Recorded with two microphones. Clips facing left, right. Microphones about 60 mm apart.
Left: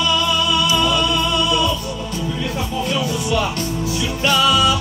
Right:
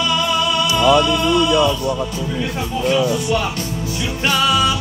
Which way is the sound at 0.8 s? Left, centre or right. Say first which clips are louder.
Right 5 dB; right.